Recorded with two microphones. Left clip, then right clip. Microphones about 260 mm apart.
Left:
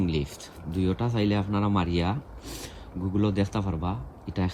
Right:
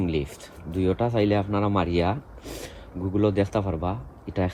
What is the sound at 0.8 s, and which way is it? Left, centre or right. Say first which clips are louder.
Speech: right 5 dB; centre.